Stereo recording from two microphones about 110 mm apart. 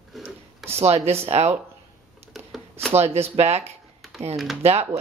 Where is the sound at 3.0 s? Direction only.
65° right (ahead or behind).